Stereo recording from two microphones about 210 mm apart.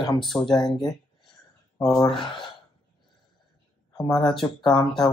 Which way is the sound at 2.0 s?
25° left (ahead or behind).